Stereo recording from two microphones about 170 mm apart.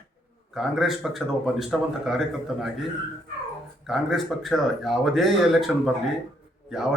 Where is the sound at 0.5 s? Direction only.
Centre (ahead or behind).